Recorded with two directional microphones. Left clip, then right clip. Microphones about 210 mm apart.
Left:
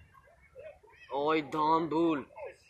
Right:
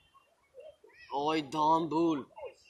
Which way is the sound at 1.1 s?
40° right (ahead or behind).